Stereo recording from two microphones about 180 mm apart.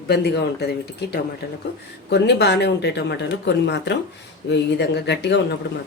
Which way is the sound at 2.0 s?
70° left (ahead or behind).